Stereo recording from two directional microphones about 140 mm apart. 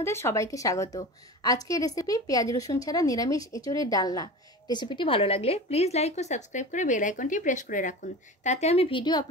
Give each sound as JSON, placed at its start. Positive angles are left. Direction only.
{"t": 0.0, "sound": "a woman's voice", "side_deg": 20}
{"t": 8.5, "sound": "speech", "side_deg": 50}